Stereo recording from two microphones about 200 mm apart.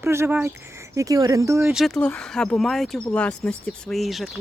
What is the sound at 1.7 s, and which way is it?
Speech, centre (ahead or behind).